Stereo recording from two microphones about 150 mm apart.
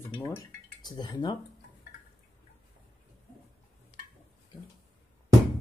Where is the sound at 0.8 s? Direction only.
30° left (ahead or behind).